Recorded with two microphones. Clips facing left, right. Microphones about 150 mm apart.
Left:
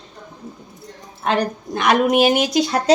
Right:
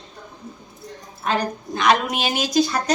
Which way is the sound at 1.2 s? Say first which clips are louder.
Left 3 dB; 60° left (ahead or behind).